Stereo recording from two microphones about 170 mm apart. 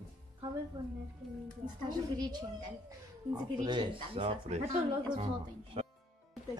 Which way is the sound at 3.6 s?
30° right (ahead or behind).